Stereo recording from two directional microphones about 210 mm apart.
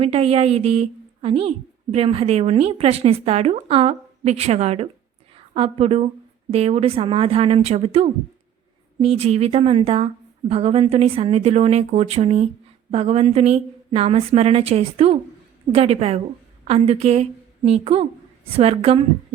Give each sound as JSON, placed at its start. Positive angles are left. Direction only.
{"t": 0.0, "sound": "a woman's voice", "side_deg": -30}